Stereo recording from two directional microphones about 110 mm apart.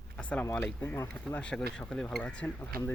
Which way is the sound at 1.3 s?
10° left (ahead or behind).